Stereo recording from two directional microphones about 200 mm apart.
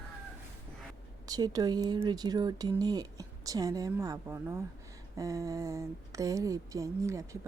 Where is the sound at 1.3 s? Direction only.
20° right (ahead or behind).